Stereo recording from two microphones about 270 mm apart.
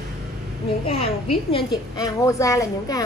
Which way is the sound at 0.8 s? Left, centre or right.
Left.